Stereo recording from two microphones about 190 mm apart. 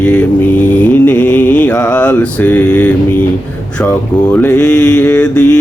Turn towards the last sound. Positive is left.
turn(degrees=5)  # may be behind; listen again after turning